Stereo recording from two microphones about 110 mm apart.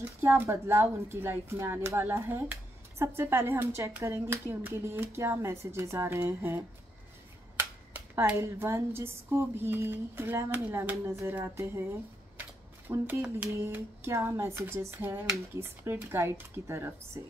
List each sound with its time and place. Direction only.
0.2 s speech: 20° right (ahead or behind)
8.4 s speech: 25° right (ahead or behind)
12.8 s speech: 20° right (ahead or behind)
13.2 s a sound: 15° right (ahead or behind)
14.1 s speech: 20° right (ahead or behind)